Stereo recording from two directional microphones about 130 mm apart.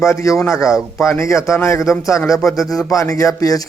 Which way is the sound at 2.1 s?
25° left (ahead or behind).